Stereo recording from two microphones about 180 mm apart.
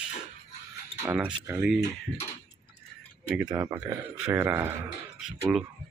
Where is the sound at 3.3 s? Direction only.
5° right (ahead or behind).